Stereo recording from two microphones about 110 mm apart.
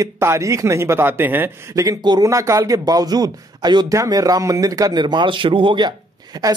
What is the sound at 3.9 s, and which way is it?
Speech, 30° right (ahead or behind).